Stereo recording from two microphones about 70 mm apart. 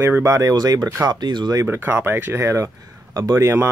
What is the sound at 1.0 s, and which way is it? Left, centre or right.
Speech, right.